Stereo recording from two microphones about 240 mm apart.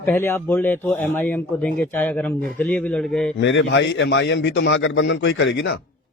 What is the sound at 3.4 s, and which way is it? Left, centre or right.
A man's voice, left.